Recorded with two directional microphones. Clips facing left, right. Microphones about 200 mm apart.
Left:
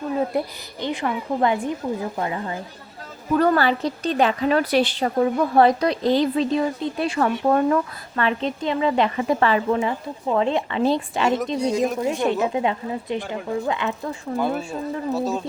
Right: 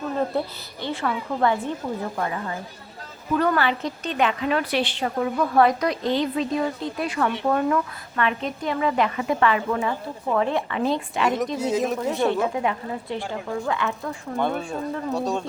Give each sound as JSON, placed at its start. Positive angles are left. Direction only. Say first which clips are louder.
{"t": 0.2, "sound": "a woman's voice", "louder": "left 1 dB", "side_deg": 15}
{"t": 3.3, "sound": "a woman's voice", "louder": "left 3 dB", "side_deg": 35}
{"t": 9.7, "sound": "a woman's voice", "louder": "left 2 dB", "side_deg": 20}
{"t": 11.5, "sound": "speech", "louder": "left 2 dB", "side_deg": -5}
{"t": 12.0, "sound": "a woman's voice", "louder": "left 1 dB", "side_deg": 15}
{"t": 14.3, "sound": "speech", "louder": "left 1 dB", "side_deg": 5}